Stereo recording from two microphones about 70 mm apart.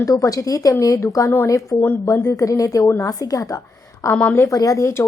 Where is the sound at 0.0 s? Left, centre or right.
Left.